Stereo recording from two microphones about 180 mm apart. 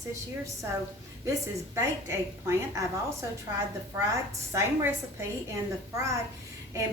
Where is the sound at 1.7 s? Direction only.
15° right (ahead or behind).